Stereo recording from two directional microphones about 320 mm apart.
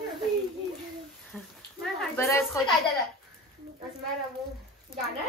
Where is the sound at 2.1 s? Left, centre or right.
Centre.